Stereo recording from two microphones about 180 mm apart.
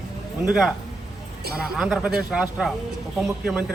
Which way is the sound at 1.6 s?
5° right (ahead or behind).